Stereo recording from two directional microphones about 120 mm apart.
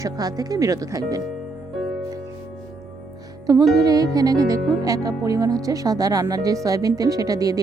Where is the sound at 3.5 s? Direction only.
30° right (ahead or behind).